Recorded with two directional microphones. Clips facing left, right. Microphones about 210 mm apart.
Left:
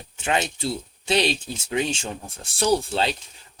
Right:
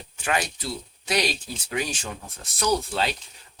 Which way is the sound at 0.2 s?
25° left (ahead or behind).